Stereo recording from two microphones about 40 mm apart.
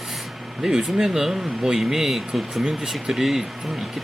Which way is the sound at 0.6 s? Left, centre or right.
Centre.